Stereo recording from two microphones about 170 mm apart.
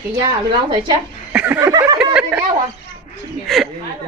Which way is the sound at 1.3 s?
10° right (ahead or behind).